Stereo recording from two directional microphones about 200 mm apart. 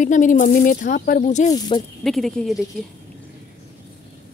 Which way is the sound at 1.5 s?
25° left (ahead or behind).